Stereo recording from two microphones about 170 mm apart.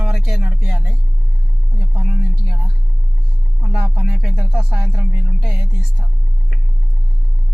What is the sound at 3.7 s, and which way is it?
Music, 5° right (ahead or behind).